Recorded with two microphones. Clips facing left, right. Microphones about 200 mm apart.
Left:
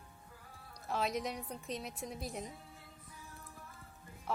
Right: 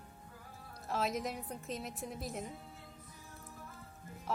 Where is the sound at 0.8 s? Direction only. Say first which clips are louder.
Even; centre (ahead or behind).